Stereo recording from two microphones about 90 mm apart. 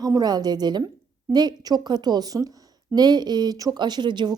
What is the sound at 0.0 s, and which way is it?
Speech, 45° right (ahead or behind).